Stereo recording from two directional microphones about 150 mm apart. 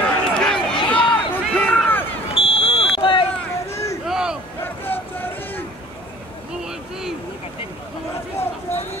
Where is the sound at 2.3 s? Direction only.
40° left (ahead or behind).